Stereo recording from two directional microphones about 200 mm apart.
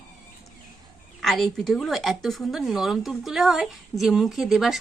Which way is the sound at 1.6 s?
Centre (ahead or behind).